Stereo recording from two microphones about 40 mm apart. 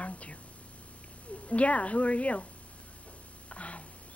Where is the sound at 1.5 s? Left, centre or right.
Left.